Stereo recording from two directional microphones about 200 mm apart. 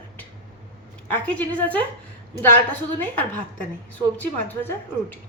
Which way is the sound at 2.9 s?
10° left (ahead or behind).